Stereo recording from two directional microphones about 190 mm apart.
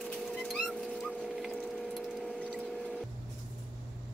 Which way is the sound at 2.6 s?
5° left (ahead or behind).